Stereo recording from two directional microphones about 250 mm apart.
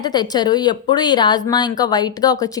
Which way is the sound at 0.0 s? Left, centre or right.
Centre.